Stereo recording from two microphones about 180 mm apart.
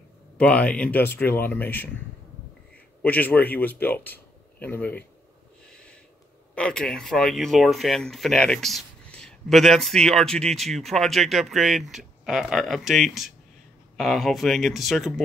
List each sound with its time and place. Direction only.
0.4 s speech: 5° left (ahead or behind)
3.0 s speech: 10° left (ahead or behind)
5.7 s a sound: 5° left (ahead or behind)
6.5 s speech: 5° left (ahead or behind)